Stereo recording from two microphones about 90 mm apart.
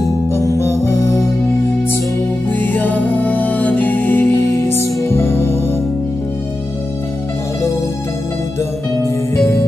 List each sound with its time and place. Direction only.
0.3 s music: 30° left (ahead or behind)
2.5 s music: 20° left (ahead or behind)